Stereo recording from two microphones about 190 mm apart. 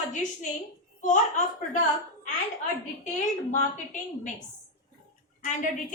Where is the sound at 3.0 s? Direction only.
40° left (ahead or behind).